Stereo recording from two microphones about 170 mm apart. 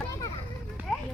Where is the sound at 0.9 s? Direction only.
Centre (ahead or behind).